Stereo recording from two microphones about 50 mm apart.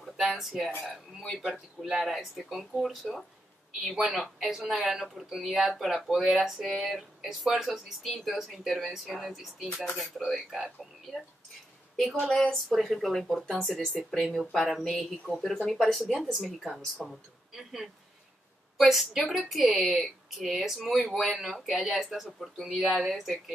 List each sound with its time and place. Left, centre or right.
0.0 s speech: centre
1.5 s a woman's voice: centre
12.3 s speech: centre
12.6 s speech: centre
13.7 s speech: centre